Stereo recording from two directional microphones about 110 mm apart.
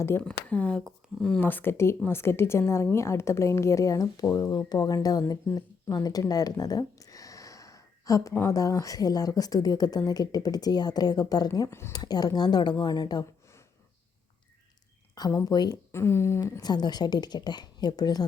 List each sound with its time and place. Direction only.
0.2 s a woman's voice: 10° left (ahead or behind); by 5.2 s 35° left (ahead or behind)
5.3 s a sound: 35° left (ahead or behind)
8.4 s a woman's voice: 30° left (ahead or behind)
15.1 s a sound: 40° left (ahead or behind)
15.4 s a woman's voice: 35° left (ahead or behind)
15.9 s a woman's voice: 25° left (ahead or behind)
16.6 s a woman's voice: 40° left (ahead or behind)